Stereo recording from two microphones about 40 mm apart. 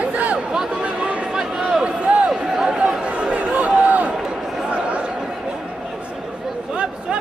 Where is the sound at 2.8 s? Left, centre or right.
Right.